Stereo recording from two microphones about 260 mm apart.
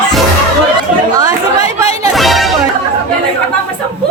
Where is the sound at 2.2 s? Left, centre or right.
Centre.